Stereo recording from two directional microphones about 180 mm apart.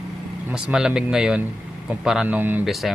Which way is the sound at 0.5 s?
5° right (ahead or behind).